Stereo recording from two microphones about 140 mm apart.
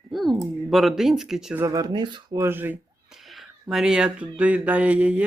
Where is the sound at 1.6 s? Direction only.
25° right (ahead or behind).